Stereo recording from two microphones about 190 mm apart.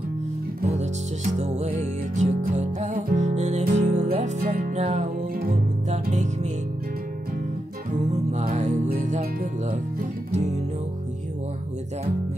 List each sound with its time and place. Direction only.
1.4 s music: 35° right (ahead or behind)
8.0 s music: 35° right (ahead or behind)